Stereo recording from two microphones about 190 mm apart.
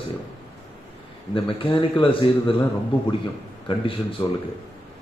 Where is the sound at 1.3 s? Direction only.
30° left (ahead or behind).